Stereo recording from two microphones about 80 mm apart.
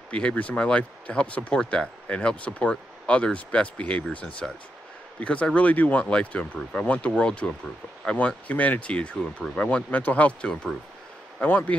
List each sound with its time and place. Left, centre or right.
0.1 s speech: centre